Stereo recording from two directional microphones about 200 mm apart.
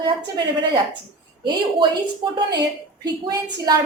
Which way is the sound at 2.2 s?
25° right (ahead or behind).